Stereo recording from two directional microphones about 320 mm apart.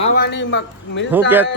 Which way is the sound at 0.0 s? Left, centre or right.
Left.